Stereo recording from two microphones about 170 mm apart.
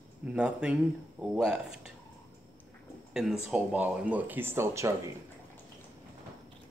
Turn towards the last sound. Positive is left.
turn(degrees=-15)  # may be behind; listen again after turning